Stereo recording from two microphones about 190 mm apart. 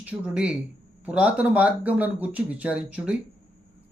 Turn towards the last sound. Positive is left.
turn(degrees=-5)  # may be behind; listen again after turning